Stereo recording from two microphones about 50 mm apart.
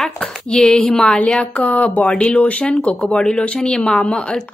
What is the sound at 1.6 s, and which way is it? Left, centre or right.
Speech, left.